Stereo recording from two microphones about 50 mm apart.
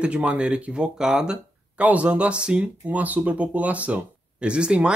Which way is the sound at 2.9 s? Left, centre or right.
Right.